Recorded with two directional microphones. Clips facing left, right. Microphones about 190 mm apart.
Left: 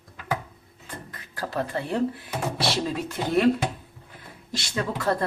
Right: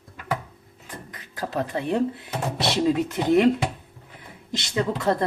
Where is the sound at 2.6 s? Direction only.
20° right (ahead or behind).